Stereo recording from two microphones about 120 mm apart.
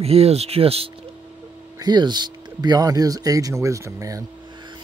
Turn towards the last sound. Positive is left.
turn(degrees=-40)  # may be behind; listen again after turning